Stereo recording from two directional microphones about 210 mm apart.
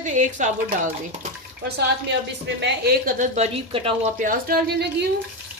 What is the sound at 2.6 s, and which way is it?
A woman's voice, 55° right (ahead or behind).